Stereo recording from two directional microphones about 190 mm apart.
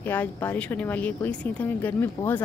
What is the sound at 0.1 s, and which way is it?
A woman's voice, 10° left (ahead or behind).